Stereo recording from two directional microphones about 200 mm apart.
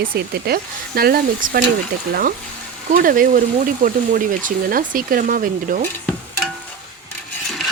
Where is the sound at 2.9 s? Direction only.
45° right (ahead or behind).